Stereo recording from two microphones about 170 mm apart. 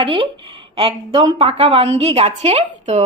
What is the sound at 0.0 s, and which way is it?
A woman's voice, 30° right (ahead or behind).